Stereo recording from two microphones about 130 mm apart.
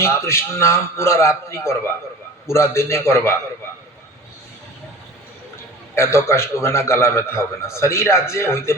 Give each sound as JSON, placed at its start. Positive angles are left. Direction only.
{"t": 0.0, "sound": "a man's voice", "side_deg": 20}
{"t": 5.9, "sound": "a man's voice", "side_deg": 20}